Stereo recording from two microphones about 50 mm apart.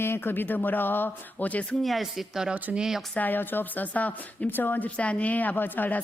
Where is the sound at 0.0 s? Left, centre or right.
Left.